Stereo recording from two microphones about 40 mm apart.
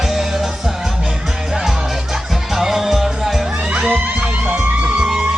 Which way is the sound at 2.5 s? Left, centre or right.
Centre.